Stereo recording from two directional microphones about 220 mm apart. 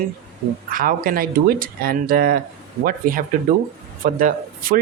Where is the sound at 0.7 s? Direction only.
40° right (ahead or behind).